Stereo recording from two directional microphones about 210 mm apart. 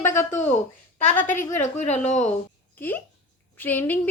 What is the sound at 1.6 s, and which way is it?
Speech, 35° left (ahead or behind).